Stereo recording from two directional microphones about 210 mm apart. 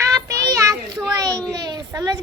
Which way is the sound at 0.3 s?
15° right (ahead or behind).